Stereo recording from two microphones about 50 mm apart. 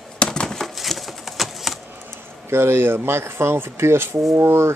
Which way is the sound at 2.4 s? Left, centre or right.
Right.